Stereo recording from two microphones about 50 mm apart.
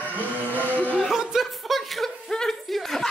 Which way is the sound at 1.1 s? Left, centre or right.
Centre.